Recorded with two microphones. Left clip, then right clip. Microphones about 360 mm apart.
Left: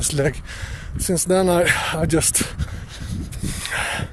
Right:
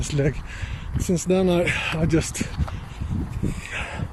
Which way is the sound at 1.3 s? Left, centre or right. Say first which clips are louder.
Left 4 dB; left.